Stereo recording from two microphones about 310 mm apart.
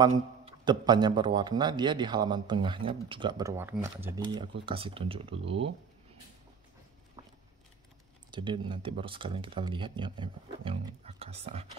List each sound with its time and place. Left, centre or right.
0.0 s a man's voice: centre
7.2 s a sound: centre
8.3 s a man's voice: centre